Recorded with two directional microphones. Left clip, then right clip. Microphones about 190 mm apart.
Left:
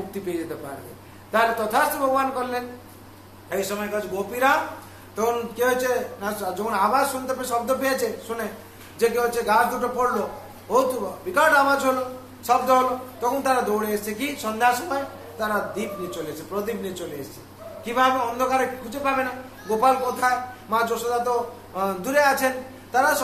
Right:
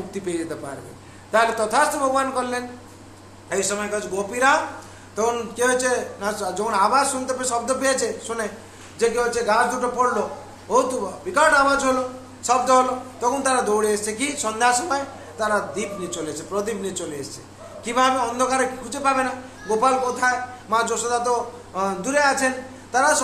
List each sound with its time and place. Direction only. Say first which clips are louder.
0.2 s a man's voice: right 3 dB; 15° right (ahead or behind)
21.7 s a man's voice: even; 10° right (ahead or behind)